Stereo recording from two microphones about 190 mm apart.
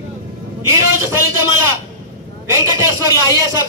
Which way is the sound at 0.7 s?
15° right (ahead or behind).